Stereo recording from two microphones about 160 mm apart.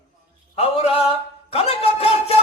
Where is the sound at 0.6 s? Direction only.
40° left (ahead or behind).